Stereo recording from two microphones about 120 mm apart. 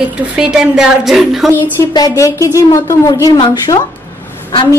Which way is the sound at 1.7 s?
30° left (ahead or behind).